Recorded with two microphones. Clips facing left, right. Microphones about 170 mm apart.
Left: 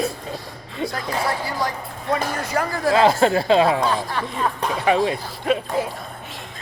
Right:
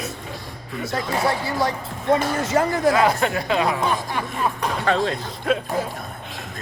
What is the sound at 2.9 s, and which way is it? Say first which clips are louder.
Speech: left 3 dB; 30° left (ahead or behind).